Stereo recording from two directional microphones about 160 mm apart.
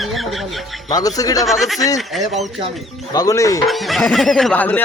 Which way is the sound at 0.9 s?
20° left (ahead or behind).